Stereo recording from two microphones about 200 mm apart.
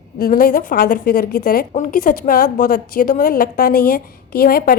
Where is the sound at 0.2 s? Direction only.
50° left (ahead or behind).